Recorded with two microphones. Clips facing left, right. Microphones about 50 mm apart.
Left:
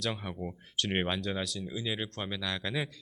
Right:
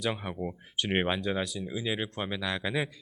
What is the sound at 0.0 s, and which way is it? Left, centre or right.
Speech, centre.